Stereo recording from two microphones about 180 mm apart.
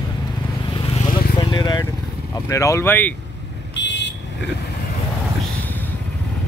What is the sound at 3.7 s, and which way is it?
Vehicle, 75° left (ahead or behind).